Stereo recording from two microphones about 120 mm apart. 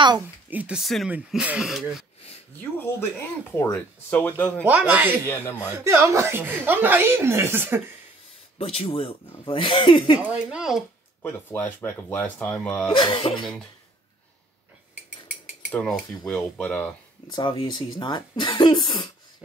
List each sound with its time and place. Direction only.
0.5 s speech: 10° right (ahead or behind)
2.6 s speech: 15° left (ahead or behind)
4.6 s speech: 10° right (ahead or behind)
5.3 s speech: 20° left (ahead or behind)
5.6 s speech: 20° right (ahead or behind)
8.5 s speech: 55° left (ahead or behind)
10.2 s speech: 10° right (ahead or behind)
11.2 s speech: 15° left (ahead or behind)
12.9 s speech: 45° left (ahead or behind)
15.7 s speech: 5° left (ahead or behind)
17.3 s speech: 45° left (ahead or behind)